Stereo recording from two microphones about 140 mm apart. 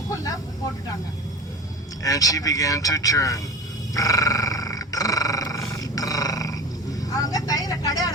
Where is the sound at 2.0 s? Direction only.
25° left (ahead or behind).